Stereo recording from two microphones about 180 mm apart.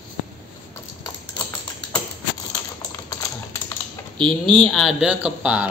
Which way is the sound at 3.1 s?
20° left (ahead or behind).